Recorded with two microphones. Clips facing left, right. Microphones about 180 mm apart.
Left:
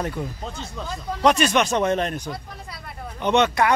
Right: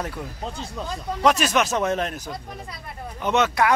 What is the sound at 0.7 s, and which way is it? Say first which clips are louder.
Speech: right 1 dB; 5° right (ahead or behind).